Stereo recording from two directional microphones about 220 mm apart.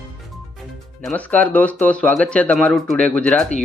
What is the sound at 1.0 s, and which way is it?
Speech, 5° left (ahead or behind).